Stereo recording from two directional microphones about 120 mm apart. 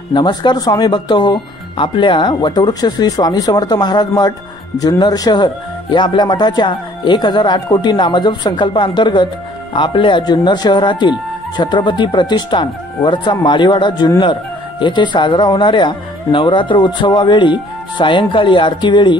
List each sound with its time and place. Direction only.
0.1 s speech: 35° left (ahead or behind)